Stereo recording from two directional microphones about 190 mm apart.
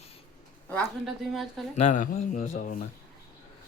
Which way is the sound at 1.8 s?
40° left (ahead or behind).